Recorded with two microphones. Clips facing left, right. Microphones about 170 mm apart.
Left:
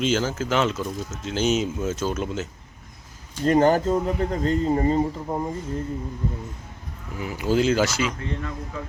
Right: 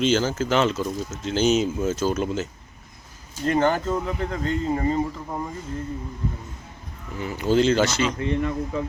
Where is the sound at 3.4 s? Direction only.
35° left (ahead or behind).